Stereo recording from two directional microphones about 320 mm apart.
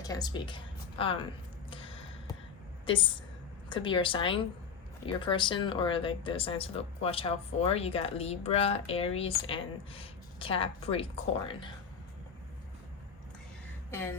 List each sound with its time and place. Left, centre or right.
0.0 s a woman's voice: centre
1.7 s a sound: centre
2.8 s speech: centre
13.9 s speech: centre